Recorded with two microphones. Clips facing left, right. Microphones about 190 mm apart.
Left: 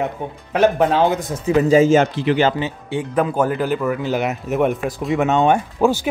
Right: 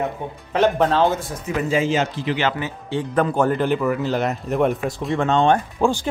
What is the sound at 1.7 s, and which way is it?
Speech, 45° left (ahead or behind).